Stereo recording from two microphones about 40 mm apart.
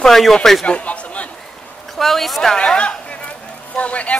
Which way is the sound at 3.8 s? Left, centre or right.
Left.